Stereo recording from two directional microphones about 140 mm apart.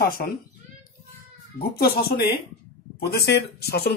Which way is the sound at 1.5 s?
90° left.